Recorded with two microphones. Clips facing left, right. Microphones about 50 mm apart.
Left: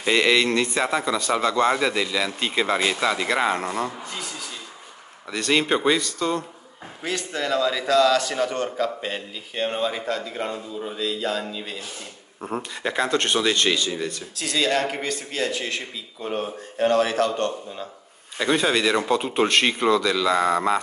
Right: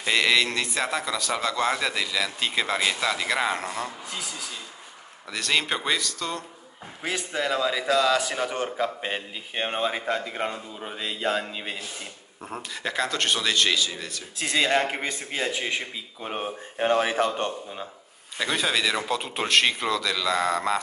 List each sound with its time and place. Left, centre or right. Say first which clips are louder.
0.0 s a man's voice: left 3 dB; centre
7.0 s a man's voice: left 1 dB; centre; by 11.8 s right
12.4 s a man's voice: left 6 dB; centre
14.3 s a man's voice: right 1 dB; right
18.4 s a man's voice: left 4 dB; centre